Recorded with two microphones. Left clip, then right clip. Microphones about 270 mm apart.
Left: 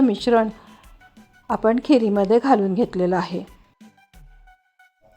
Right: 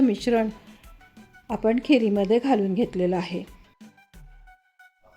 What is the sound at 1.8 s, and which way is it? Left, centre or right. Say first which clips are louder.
Speech: left 3 dB; centre.